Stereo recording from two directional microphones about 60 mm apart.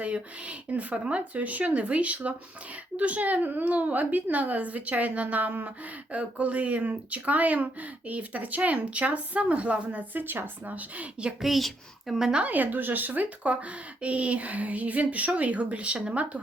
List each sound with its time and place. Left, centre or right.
0.0 s a woman's voice: right
11.4 s a child's voice: centre
12.4 s a woman's voice: right